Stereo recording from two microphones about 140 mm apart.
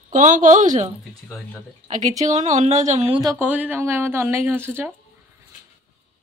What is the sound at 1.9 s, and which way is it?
Speech, 60° right (ahead or behind).